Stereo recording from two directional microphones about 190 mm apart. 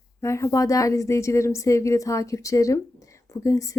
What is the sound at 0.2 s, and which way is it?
A woman's voice, 15° left (ahead or behind).